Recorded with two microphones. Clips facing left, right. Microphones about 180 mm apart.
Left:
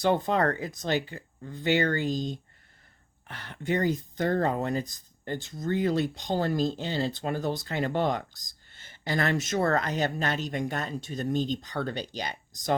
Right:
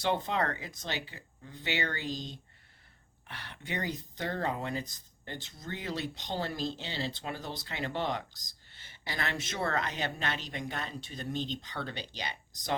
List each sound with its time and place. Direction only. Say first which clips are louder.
0.0 s speech: left 6 dB; 45° left (ahead or behind)